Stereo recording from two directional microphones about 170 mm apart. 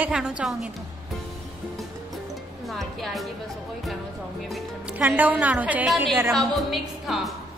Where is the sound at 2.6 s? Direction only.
Centre (ahead or behind).